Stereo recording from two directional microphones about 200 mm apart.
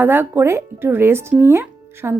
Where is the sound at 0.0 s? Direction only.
10° right (ahead or behind).